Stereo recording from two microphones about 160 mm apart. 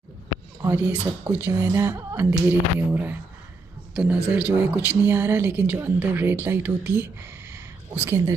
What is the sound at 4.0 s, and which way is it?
A woman's voice, 5° right (ahead or behind).